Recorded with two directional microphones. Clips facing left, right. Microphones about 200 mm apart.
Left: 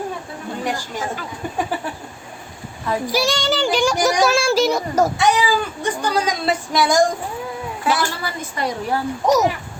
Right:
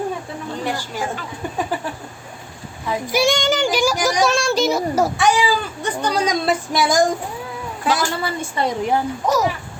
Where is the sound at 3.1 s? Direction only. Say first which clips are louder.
Right 4 dB; 20° right (ahead or behind).